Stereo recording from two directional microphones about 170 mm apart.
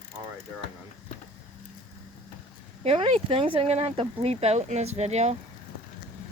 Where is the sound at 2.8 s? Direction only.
35° right (ahead or behind).